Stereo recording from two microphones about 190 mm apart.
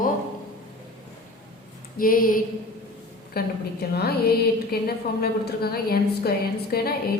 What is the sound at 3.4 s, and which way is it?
A woman's voice, 55° left (ahead or behind).